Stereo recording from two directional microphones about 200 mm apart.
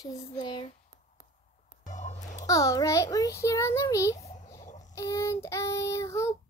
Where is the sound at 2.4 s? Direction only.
15° left (ahead or behind).